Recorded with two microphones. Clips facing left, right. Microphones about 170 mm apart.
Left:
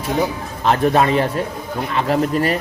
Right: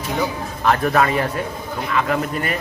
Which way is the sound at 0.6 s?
25° left (ahead or behind).